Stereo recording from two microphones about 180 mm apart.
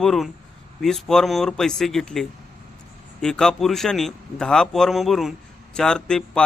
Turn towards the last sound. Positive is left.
turn(degrees=5)  # may be behind; listen again after turning